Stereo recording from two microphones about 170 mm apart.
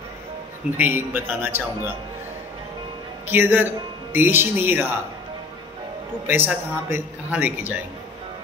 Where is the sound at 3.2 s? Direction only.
10° right (ahead or behind).